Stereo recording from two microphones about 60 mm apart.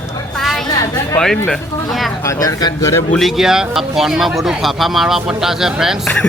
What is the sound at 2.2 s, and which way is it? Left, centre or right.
Speech, left.